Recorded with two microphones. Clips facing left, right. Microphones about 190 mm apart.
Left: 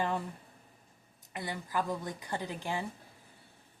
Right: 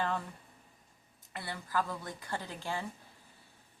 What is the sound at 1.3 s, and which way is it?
A woman's voice, 15° left (ahead or behind).